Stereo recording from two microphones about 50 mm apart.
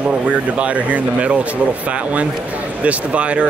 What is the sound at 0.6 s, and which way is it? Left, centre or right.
Speech, right.